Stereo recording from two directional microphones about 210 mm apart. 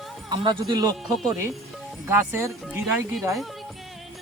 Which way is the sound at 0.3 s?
20° right (ahead or behind).